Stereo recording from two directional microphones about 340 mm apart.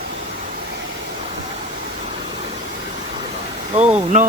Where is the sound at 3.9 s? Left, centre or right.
Centre.